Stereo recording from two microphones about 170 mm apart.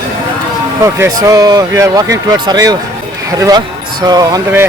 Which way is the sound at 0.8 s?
15° right (ahead or behind).